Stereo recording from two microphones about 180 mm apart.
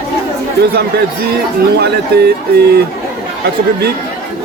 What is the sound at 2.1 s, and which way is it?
Speech, 60° right (ahead or behind).